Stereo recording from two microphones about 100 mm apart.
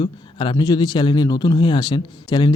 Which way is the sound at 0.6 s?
40° left (ahead or behind).